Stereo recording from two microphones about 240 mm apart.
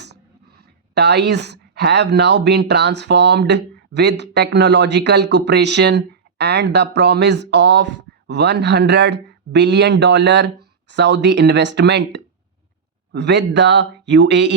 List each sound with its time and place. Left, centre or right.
0.9 s speech: right